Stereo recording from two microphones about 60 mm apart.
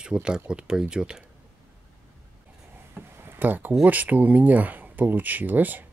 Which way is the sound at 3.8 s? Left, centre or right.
Right.